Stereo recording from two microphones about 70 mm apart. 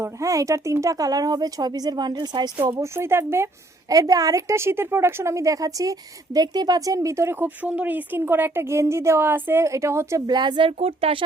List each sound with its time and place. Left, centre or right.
0.0 s a woman's voice: right
2.7 s speech: right
3.8 s a woman's voice: right
7.4 s speech: right
9.6 s a woman's voice: right
10.2 s a woman's voice: right